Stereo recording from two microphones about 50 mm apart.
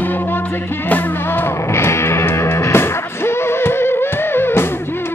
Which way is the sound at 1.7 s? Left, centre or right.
Left.